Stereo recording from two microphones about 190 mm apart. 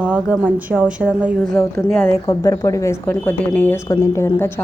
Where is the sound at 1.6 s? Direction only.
10° left (ahead or behind).